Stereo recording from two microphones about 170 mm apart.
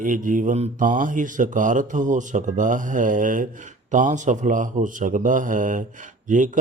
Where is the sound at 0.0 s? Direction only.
50° right (ahead or behind).